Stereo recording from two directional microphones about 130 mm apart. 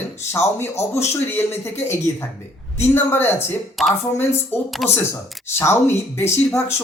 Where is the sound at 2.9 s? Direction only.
15° left (ahead or behind).